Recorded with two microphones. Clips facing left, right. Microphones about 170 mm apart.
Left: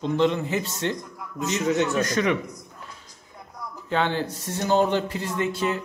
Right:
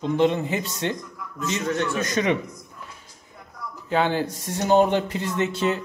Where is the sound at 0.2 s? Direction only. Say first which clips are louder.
Right 2 dB; 15° right (ahead or behind).